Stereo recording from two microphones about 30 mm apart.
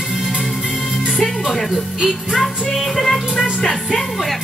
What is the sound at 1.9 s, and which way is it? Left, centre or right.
Music, right.